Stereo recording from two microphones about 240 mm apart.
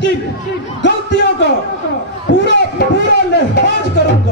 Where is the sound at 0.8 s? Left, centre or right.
Left.